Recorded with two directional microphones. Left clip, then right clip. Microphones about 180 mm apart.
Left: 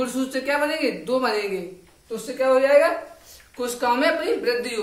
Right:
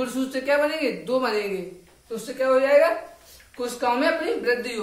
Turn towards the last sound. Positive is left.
turn(degrees=30)  # may be behind; listen again after turning